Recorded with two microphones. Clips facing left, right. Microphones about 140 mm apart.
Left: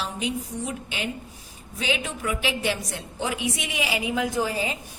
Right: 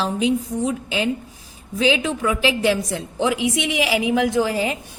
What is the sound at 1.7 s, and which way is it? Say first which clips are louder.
A woman's voice: right 9 dB; 90° right.